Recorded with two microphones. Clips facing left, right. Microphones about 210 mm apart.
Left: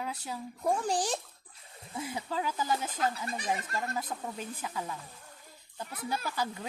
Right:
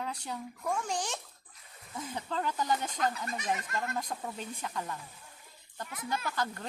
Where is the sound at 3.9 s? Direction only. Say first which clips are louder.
Even; 5° left (ahead or behind).